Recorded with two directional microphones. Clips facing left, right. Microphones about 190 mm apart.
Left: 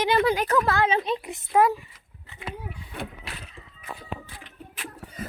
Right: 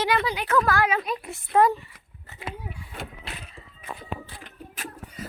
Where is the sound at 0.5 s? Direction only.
25° left (ahead or behind).